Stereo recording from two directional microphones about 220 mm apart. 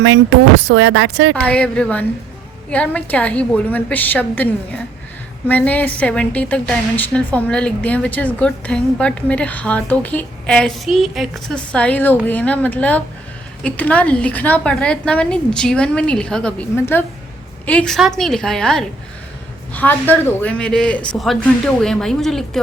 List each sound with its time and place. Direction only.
0.0 s speech: 60° right (ahead or behind)
1.5 s a woman's voice: 5° left (ahead or behind)
5.5 s a woman's voice: 5° left (ahead or behind)